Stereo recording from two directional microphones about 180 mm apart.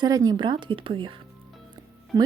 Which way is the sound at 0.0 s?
20° right (ahead or behind).